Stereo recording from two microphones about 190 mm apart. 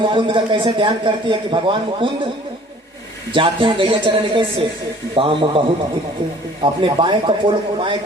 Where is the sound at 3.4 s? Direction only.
25° right (ahead or behind).